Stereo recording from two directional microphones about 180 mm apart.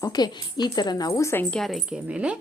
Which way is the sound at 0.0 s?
20° left (ahead or behind).